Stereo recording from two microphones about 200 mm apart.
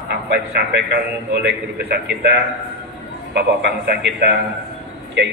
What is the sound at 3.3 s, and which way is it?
A man's voice, 55° right (ahead or behind).